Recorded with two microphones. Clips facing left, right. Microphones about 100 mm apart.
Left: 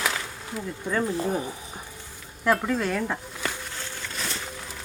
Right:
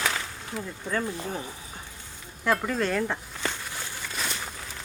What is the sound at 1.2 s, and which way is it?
Speech, 15° left (ahead or behind).